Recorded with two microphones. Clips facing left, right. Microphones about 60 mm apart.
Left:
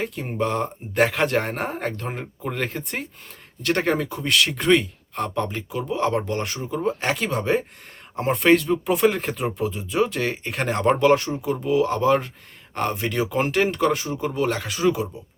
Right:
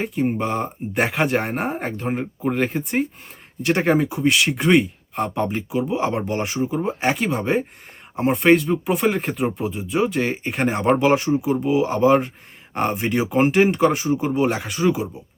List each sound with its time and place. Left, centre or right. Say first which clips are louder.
0.0 s speech: right 3 dB; centre
14.6 s speech: right 1 dB; centre